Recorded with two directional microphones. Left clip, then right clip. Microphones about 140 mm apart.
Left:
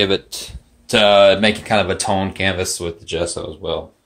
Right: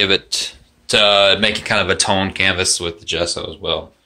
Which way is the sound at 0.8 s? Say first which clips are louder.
Left 1 dB; 25° left (ahead or behind).